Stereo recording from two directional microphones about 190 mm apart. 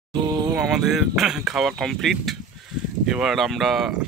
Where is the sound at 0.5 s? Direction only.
5° right (ahead or behind).